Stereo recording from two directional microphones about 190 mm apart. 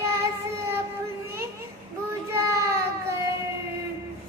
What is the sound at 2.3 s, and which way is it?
Child singing, 15° right (ahead or behind).